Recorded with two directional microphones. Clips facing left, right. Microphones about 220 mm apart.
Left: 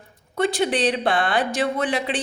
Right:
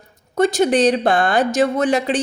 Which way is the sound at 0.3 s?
45° right (ahead or behind).